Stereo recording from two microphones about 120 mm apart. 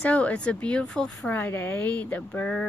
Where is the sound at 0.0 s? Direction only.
10° left (ahead or behind).